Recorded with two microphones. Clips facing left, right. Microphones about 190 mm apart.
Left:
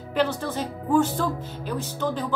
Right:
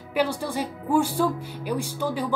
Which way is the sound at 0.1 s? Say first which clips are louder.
Even; 10° right (ahead or behind).